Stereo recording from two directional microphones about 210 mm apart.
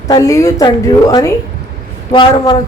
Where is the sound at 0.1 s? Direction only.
15° left (ahead or behind).